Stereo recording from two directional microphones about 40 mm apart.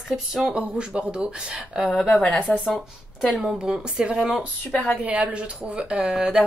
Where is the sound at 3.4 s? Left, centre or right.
Right.